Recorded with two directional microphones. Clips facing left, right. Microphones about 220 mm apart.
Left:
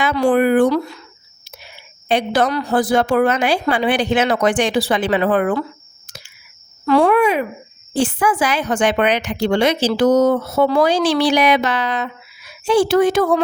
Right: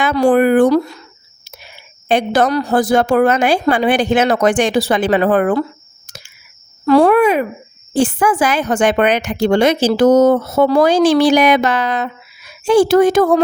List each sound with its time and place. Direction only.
0.0 s a woman's voice: 45° right (ahead or behind)
2.0 s a woman's voice: 45° right (ahead or behind)
6.1 s a sound: 45° right (ahead or behind)
7.9 s a woman's voice: 45° right (ahead or behind)